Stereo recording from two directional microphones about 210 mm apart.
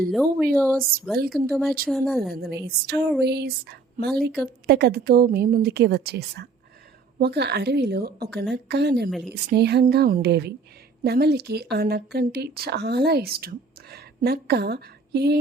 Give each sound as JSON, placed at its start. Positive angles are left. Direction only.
{"t": 0.1, "sound": "speech", "side_deg": 0}
{"t": 2.3, "sound": "speech", "side_deg": -50}
{"t": 9.0, "sound": "speech", "side_deg": 0}
{"t": 9.3, "sound": "speech", "side_deg": -50}